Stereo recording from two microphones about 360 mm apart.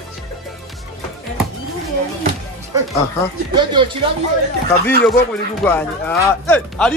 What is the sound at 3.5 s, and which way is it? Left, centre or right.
Speech, centre.